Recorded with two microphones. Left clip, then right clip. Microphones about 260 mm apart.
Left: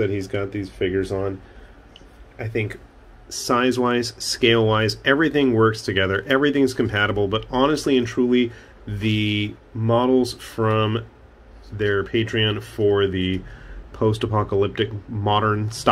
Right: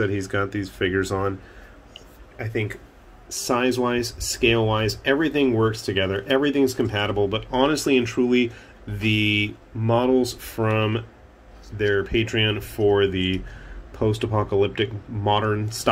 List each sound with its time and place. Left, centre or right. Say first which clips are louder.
0.0 s speech: even; centre
2.3 s speech: left 1 dB; centre